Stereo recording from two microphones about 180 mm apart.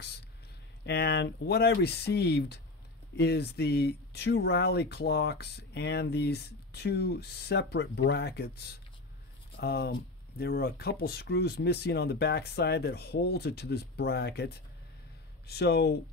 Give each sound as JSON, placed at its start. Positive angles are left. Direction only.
{"t": 0.8, "sound": "speech", "side_deg": 65}